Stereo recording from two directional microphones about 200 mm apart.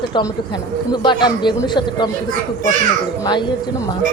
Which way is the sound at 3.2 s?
20° left (ahead or behind).